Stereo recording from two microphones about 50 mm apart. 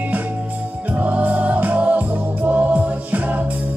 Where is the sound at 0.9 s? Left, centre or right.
Right.